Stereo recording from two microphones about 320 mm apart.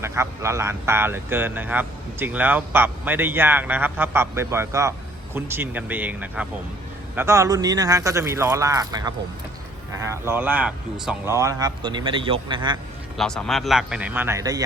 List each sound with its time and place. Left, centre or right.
0.0 s speech: centre
13.1 s a man's voice: centre